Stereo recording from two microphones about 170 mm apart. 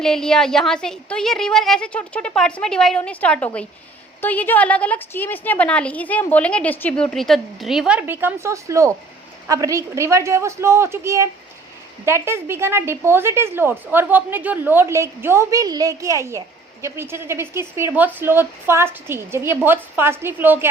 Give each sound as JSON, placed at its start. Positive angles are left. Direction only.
{"t": 0.0, "sound": "a woman's voice", "side_deg": 5}